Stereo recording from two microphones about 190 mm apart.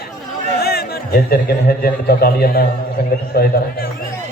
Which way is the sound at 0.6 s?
55° left (ahead or behind).